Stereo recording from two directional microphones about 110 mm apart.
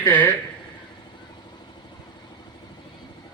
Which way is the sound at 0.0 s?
15° left (ahead or behind).